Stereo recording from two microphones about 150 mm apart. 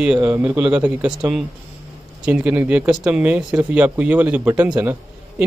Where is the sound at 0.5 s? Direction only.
5° right (ahead or behind).